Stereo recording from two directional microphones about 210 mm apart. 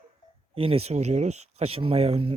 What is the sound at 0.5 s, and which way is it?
Speech, 25° right (ahead or behind).